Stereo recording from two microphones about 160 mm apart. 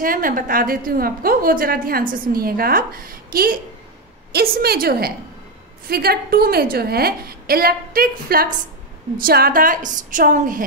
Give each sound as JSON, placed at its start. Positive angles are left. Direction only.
{"t": 0.0, "sound": "a woman's voice", "side_deg": -60}
{"t": 4.3, "sound": "a woman's voice", "side_deg": -75}